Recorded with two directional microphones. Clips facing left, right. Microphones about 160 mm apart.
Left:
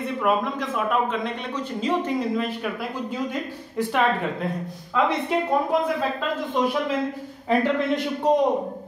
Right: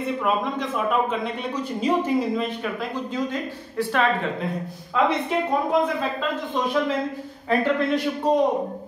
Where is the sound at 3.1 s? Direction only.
15° left (ahead or behind).